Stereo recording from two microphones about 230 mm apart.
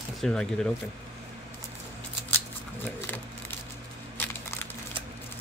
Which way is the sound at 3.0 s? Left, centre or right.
Centre.